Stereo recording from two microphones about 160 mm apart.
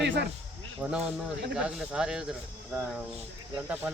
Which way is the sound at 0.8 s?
5° right (ahead or behind).